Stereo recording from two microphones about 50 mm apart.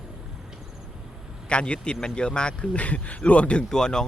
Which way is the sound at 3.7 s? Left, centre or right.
Centre.